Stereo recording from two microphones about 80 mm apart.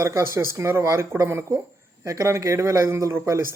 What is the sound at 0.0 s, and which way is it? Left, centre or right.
Speech, right.